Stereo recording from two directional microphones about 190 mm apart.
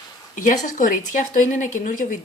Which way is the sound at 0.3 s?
40° left (ahead or behind).